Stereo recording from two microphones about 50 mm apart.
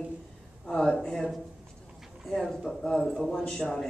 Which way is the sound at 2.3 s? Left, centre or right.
Centre.